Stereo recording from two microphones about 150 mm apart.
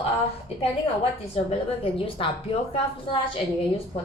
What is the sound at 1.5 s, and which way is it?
A woman's voice, 40° left (ahead or behind).